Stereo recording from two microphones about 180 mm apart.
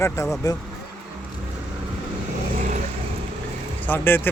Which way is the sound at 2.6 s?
40° right (ahead or behind).